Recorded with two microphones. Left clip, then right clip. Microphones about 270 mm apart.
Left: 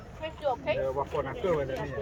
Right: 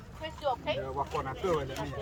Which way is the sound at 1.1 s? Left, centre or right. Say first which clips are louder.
Even; centre.